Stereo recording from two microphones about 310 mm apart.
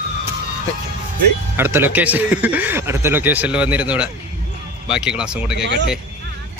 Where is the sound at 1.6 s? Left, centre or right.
Centre.